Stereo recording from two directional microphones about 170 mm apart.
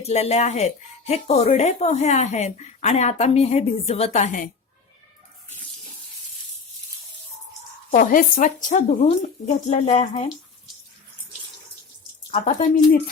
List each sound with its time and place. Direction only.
0.0 s speech: 40° left (ahead or behind)
7.9 s speech: 55° left (ahead or behind)
12.3 s speech: 45° left (ahead or behind)